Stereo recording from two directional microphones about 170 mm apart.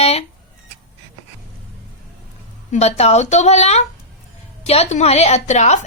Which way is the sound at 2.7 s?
40° left (ahead or behind).